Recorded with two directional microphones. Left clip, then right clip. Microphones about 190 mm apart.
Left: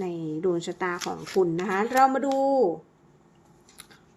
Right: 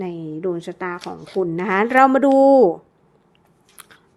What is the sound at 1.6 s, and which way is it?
A woman's voice, 30° right (ahead or behind).